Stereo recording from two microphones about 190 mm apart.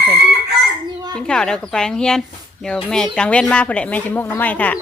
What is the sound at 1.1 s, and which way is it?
Speech, 5° left (ahead or behind).